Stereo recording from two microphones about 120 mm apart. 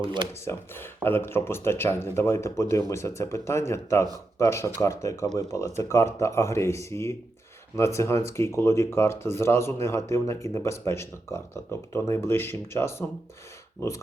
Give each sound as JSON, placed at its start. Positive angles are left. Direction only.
{"t": 0.0, "sound": "speech", "side_deg": -40}
{"t": 0.4, "sound": "speech", "side_deg": 20}